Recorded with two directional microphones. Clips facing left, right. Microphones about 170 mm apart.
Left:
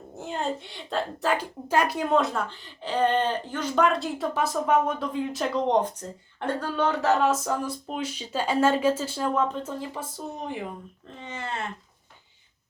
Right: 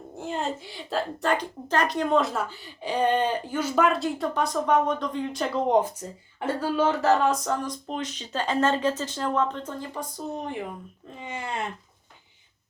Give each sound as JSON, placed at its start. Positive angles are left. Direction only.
{"t": 0.2, "sound": "a woman's voice", "side_deg": 0}
{"t": 11.1, "sound": "speech", "side_deg": -10}